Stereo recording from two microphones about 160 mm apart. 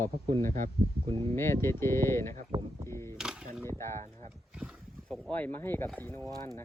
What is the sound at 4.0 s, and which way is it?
Speech, 45° right (ahead or behind).